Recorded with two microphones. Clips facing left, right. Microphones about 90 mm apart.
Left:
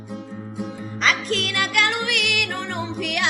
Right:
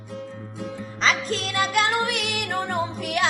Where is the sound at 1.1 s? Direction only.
60° left (ahead or behind).